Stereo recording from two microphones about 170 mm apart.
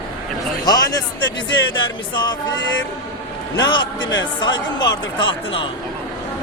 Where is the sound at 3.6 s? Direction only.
25° left (ahead or behind).